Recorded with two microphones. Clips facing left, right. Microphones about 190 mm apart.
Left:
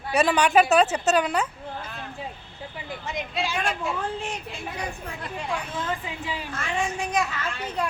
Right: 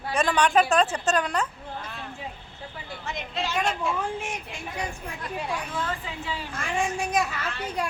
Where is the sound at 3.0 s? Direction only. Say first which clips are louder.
Left 2 dB; 15° left (ahead or behind).